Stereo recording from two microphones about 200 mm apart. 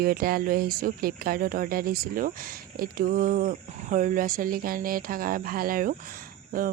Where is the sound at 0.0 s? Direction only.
50° right (ahead or behind).